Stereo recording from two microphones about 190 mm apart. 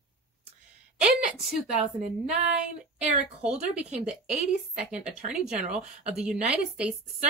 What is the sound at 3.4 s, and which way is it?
A woman's voice, 5° right (ahead or behind).